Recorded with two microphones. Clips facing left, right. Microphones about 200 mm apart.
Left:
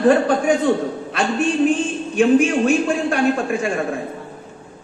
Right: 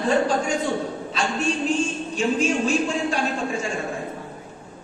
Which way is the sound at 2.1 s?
60° left (ahead or behind).